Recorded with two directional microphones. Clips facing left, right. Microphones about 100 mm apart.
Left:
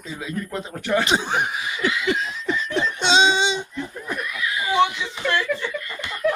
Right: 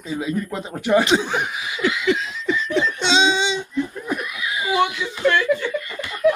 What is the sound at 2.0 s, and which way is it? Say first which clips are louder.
Laughter: right 3 dB; 35° left (ahead or behind).